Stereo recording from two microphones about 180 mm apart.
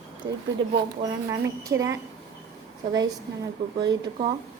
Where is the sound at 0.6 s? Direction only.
30° right (ahead or behind).